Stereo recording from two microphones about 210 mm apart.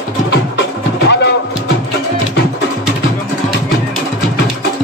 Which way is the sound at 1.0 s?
55° left (ahead or behind).